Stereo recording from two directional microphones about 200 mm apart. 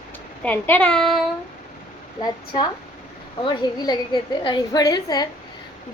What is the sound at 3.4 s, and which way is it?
A woman's voice, 20° left (ahead or behind).